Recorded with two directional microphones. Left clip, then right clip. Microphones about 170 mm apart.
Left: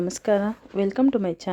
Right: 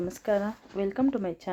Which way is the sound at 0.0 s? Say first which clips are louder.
Left 5 dB; 50° left (ahead or behind).